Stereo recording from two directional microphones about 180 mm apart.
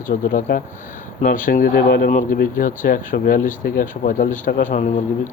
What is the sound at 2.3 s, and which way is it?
A man's voice, 50° left (ahead or behind).